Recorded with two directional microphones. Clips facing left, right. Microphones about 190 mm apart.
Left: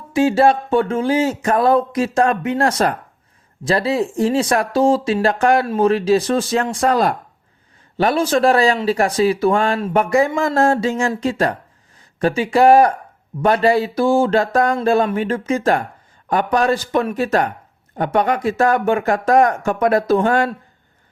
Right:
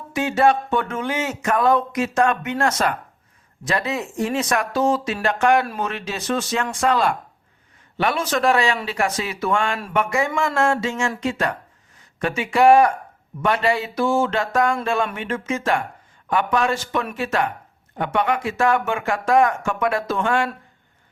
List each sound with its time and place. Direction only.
0.1 s speech: 30° left (ahead or behind)